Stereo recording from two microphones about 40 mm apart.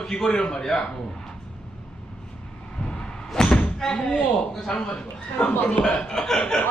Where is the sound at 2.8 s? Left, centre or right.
Centre.